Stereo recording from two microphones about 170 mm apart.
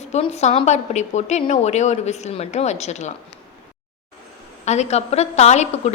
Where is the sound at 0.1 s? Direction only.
40° left (ahead or behind).